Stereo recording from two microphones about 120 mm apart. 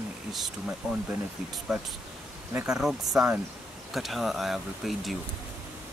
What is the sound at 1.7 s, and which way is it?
Speech, 5° right (ahead or behind).